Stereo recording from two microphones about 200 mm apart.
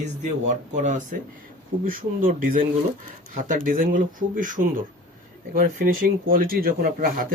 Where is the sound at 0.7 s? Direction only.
35° right (ahead or behind).